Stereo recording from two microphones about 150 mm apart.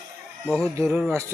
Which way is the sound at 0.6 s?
20° right (ahead or behind).